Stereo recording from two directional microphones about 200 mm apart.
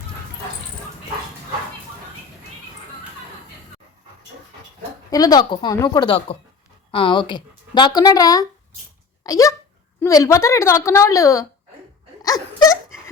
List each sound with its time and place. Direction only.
5.1 s a woman's voice: 20° left (ahead or behind)
12.2 s wail: 15° left (ahead or behind)